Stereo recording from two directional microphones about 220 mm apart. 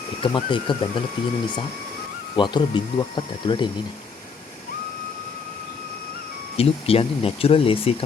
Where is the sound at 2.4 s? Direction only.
20° left (ahead or behind).